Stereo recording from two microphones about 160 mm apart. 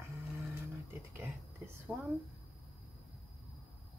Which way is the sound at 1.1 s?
15° right (ahead or behind).